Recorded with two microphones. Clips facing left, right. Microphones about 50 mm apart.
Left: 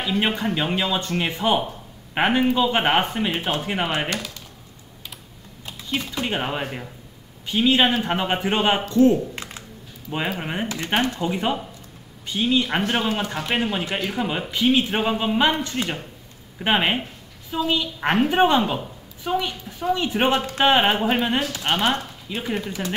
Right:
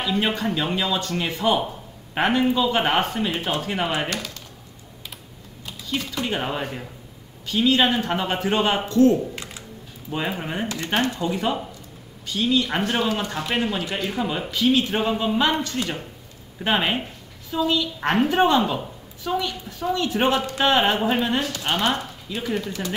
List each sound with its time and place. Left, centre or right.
0.0 s speech: centre
5.9 s speech: centre
10.4 s speech: centre